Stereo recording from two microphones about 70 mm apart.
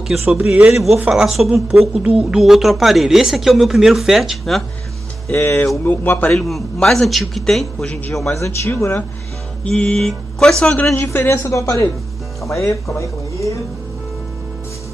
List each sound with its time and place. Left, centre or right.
0.3 s speech: centre
0.7 s speech: centre
5.3 s speech: left
6.3 s speech: centre
7.8 s music: centre
8.3 s speech: left
9.7 s music: centre
11.0 s speech: left